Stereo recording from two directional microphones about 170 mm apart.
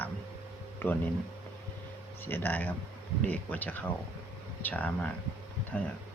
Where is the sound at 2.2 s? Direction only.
10° left (ahead or behind).